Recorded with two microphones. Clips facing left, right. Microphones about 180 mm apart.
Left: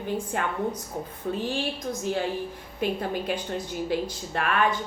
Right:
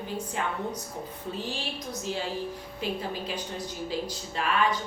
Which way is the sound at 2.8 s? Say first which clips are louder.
Left 5 dB; 55° left (ahead or behind).